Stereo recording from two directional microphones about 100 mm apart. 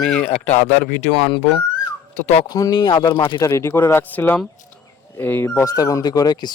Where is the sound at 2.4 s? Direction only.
40° left (ahead or behind).